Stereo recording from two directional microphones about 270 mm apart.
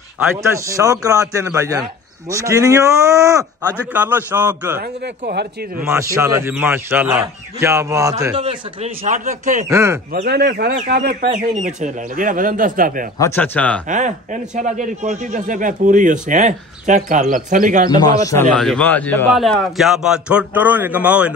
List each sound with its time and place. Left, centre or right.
0.2 s speech: centre
4.7 s speech: right
5.8 s speech: centre; by 9.7 s right
9.7 s speech: centre
10.1 s a man's voice: right
13.2 s speech: centre
13.8 s a man's voice: right
17.8 s speech: centre
18.5 s a man's voice: centre